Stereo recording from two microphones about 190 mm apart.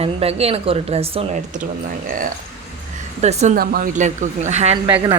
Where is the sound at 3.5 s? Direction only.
50° right (ahead or behind); by 4.8 s 35° right (ahead or behind).